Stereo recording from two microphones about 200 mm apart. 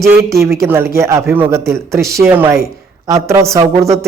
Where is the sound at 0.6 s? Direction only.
10° right (ahead or behind).